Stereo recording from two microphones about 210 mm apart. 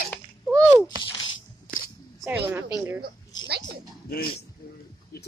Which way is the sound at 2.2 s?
10° right (ahead or behind).